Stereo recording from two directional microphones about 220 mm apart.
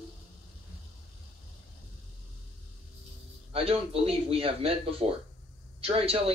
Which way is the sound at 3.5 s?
25° right (ahead or behind).